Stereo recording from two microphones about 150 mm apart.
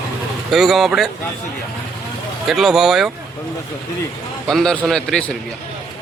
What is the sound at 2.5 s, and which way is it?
Speech, centre (ahead or behind).